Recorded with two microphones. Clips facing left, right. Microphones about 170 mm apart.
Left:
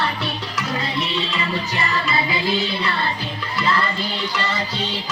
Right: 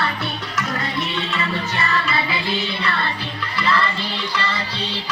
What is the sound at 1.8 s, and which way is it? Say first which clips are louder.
Music: even; 20° left (ahead or behind).